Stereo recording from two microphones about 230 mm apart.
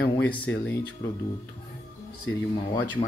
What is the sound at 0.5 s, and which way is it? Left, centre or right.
Speech, left.